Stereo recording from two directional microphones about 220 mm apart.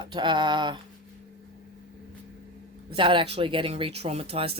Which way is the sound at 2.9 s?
20° right (ahead or behind).